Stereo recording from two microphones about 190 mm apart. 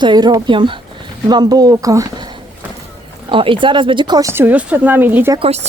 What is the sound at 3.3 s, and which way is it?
Speech, 25° right (ahead or behind).